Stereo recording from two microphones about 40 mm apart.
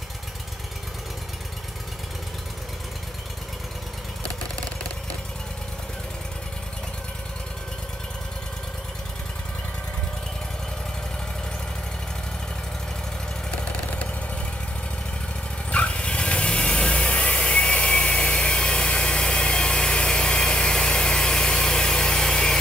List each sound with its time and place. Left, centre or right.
15.7 s vehicle: left